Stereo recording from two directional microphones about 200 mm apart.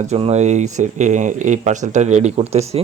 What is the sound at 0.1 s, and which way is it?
Speech, 35° right (ahead or behind).